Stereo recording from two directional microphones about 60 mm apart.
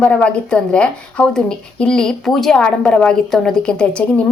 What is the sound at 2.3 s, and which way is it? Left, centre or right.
A woman's voice, centre.